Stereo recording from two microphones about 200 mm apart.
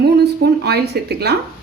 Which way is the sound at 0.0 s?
55° right (ahead or behind).